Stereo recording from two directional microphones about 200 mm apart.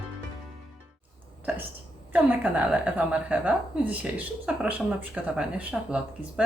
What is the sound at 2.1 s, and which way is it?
Speech, 5° right (ahead or behind).